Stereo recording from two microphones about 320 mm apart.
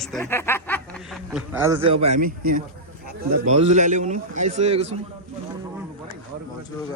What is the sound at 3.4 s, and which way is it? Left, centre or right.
A man's voice, right.